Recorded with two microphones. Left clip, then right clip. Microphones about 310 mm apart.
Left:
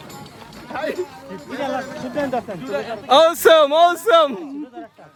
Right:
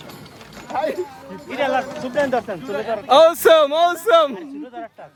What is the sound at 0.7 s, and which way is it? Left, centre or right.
Speech, centre.